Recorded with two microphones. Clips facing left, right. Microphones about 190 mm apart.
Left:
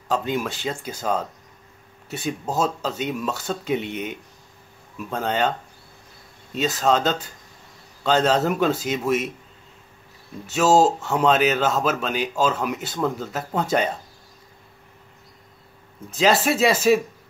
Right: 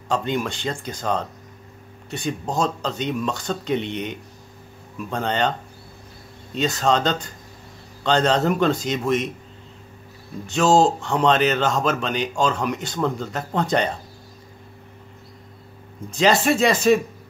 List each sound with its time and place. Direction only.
0.1 s a man's voice: 5° left (ahead or behind)
6.5 s a man's voice: 5° left (ahead or behind)
10.4 s a man's voice: 5° left (ahead or behind)
16.1 s a man's voice: 5° left (ahead or behind)